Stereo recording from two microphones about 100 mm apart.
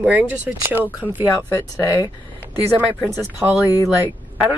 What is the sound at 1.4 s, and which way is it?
Speech, 25° left (ahead or behind).